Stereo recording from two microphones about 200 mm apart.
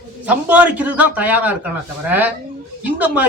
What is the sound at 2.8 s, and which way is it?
Speech, 10° right (ahead or behind).